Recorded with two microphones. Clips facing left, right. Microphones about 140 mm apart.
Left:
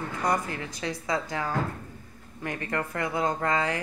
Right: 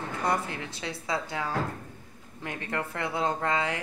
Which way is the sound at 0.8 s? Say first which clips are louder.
Left 3 dB; 5° right (ahead or behind).